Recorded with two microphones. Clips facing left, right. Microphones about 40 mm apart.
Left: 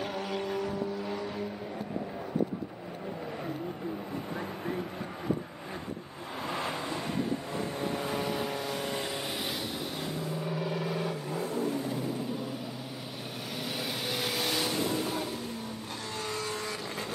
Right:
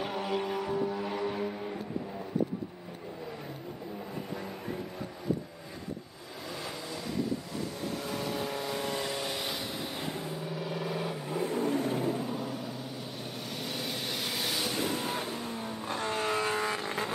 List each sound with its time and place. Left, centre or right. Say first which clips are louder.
0.0 s vehicle: right 1 dB; centre
6.5 s vehicle: left 5 dB; left
7.8 s vehicle: left 3 dB; left
10.4 s vehicle: left 3 dB; centre
11.4 s vehicle: right 3 dB; right
12.3 s vehicle: even; centre
13.7 s vehicle: left 3 dB; centre
14.9 s vehicle: left 1 dB; right